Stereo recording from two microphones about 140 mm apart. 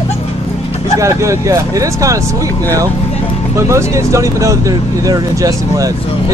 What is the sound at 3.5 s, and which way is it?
Speech, 20° right (ahead or behind).